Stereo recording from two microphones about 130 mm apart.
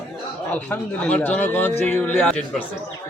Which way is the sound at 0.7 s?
10° left (ahead or behind).